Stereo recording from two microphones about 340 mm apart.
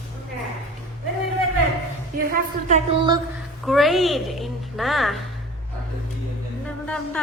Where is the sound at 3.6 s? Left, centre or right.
Centre.